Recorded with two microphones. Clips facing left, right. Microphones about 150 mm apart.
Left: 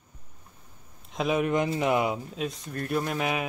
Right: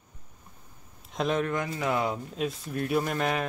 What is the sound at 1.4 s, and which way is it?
Speech, 20° left (ahead or behind).